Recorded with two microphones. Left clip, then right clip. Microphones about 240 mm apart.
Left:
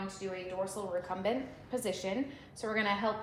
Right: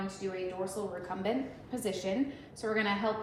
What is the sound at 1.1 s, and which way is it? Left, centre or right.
A woman's voice, left.